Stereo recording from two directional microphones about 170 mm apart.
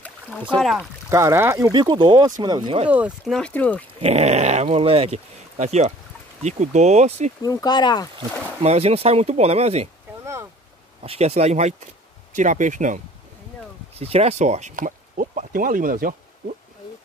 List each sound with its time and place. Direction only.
0.0 s rowboat: 10° left (ahead or behind)
0.6 s speech: centre (ahead or behind)
1.1 s speech: 15° right (ahead or behind)
2.9 s speech: 10° right (ahead or behind)
3.3 s speech: 5° left (ahead or behind)
4.0 s speech: 40° right (ahead or behind)
7.4 s speech: 25° left (ahead or behind)
8.6 s speech: 35° right (ahead or behind)
11.0 s speech: 40° right (ahead or behind)
13.9 s speech: 35° right (ahead or behind); by 16.2 s 55° right (ahead or behind)